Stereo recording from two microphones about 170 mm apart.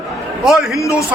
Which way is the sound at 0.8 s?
15° left (ahead or behind).